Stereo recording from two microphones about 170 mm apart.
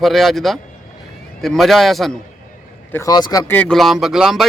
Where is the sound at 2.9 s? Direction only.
20° left (ahead or behind).